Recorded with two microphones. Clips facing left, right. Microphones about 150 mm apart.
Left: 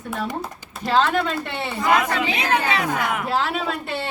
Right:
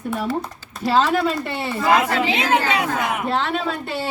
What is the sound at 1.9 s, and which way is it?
Speech, 25° right (ahead or behind).